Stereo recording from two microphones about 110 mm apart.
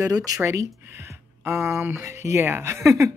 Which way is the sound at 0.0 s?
35° right (ahead or behind).